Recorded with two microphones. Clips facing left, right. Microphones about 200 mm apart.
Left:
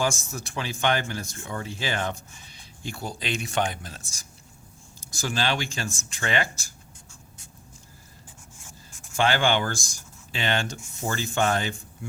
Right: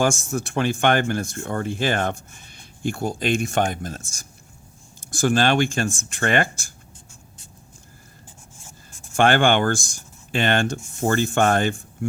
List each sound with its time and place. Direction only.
0.0 s speech: 50° right (ahead or behind)
9.1 s speech: 55° right (ahead or behind)